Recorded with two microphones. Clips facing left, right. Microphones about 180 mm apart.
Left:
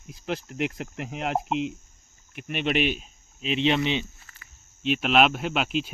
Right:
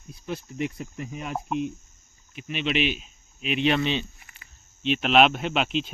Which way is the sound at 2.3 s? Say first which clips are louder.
Left 1 dB; 55° left (ahead or behind).